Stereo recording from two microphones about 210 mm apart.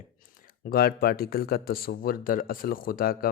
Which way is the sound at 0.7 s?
45° left (ahead or behind).